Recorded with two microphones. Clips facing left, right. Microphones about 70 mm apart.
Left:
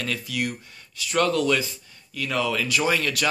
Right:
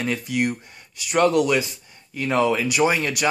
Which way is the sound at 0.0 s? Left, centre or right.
Right.